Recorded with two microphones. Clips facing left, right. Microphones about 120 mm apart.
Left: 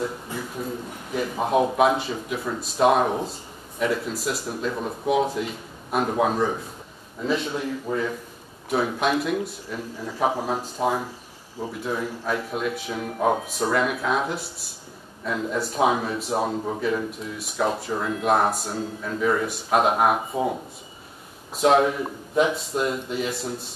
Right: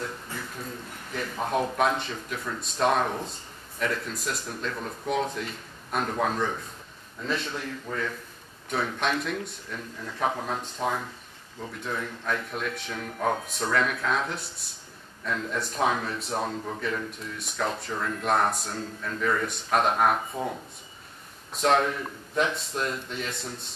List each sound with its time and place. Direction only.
0.0 s a sound: 10° left (ahead or behind)
1.8 s speech: 5° left (ahead or behind)
16.5 s speech: 20° left (ahead or behind)
17.1 s speech: 5° left (ahead or behind)
21.5 s speech: 5° left (ahead or behind)